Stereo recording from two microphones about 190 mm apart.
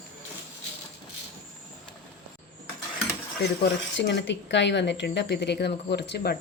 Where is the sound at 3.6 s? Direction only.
65° left (ahead or behind).